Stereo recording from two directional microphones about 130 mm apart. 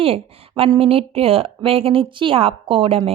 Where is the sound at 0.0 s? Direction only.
50° right (ahead or behind).